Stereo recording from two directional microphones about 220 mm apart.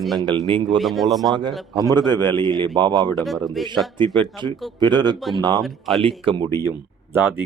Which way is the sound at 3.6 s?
Centre (ahead or behind).